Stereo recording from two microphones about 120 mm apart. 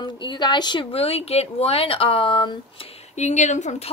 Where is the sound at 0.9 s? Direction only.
55° left (ahead or behind).